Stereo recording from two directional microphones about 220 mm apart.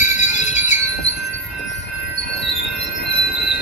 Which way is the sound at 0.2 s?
30° left (ahead or behind).